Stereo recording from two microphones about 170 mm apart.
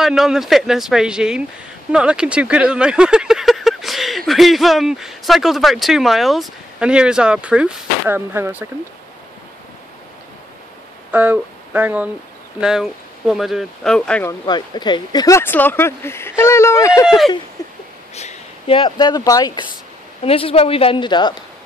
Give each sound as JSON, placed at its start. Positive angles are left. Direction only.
{"t": 0.0, "sound": "speech", "side_deg": 0}
{"t": 11.1, "sound": "speech", "side_deg": -10}
{"t": 14.4, "sound": "speech", "side_deg": 25}
{"t": 17.6, "sound": "a sound", "side_deg": 20}
{"t": 18.1, "sound": "speech", "side_deg": 35}
{"t": 20.2, "sound": "a woman's voice", "side_deg": 35}